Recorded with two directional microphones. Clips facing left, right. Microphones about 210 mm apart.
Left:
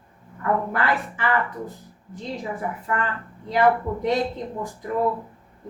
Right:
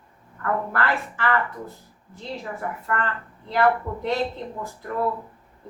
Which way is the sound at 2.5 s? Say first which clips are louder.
Even; 15° left (ahead or behind).